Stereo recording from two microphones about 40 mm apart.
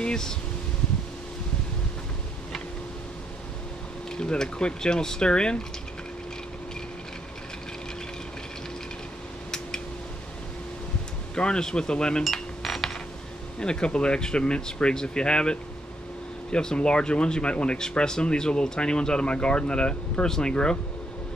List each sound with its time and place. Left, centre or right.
0.0 s a sound: centre
4.2 s speech: left
11.3 s speech: left
12.2 s a sound: centre
13.6 s speech: left
16.5 s speech: left